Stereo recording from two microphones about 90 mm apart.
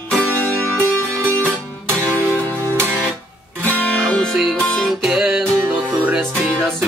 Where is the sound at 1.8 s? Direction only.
20° right (ahead or behind).